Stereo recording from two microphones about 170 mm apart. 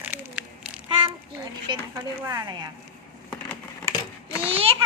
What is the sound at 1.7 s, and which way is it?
Speech, 25° right (ahead or behind).